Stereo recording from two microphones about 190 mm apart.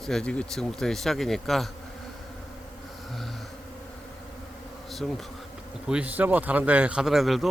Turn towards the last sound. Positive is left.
turn(degrees=0)  # may be behind; listen again after turning